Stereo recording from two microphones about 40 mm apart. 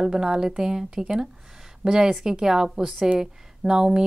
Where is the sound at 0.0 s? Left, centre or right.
Centre.